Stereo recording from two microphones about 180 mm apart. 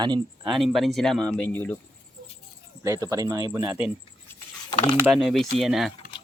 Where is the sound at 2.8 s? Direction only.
15° right (ahead or behind).